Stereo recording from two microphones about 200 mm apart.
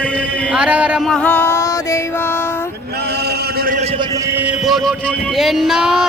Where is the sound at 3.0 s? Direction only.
55° right (ahead or behind).